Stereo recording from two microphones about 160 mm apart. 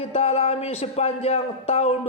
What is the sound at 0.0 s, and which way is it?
A man's voice, 40° left (ahead or behind).